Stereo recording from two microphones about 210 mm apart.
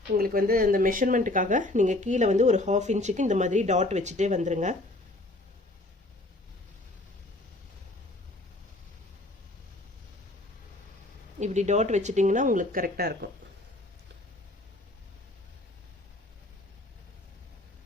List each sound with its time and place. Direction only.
0.2 s speech: 45° right (ahead or behind)
11.3 s speech: 35° right (ahead or behind)